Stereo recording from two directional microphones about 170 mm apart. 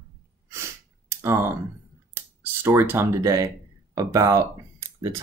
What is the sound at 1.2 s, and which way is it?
Speech, 15° right (ahead or behind).